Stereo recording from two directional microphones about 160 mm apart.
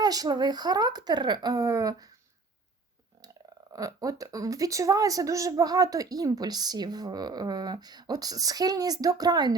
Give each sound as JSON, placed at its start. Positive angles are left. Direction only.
{"t": 0.0, "sound": "speech", "side_deg": -25}
{"t": 3.7, "sound": "speech", "side_deg": -20}